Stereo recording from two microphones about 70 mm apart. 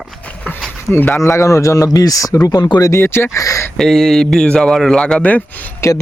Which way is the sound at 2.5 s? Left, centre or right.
Left.